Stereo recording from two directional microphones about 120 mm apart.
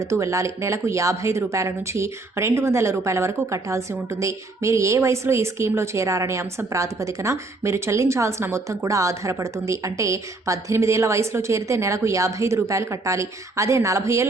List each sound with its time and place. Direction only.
0.0 s speech: 25° right (ahead or behind)